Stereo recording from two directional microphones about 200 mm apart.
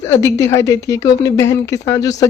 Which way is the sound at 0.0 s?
15° left (ahead or behind).